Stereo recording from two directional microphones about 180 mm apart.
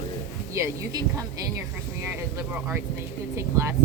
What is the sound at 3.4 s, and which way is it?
Speech, 15° right (ahead or behind).